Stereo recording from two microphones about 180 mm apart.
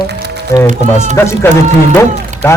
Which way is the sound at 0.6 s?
40° right (ahead or behind).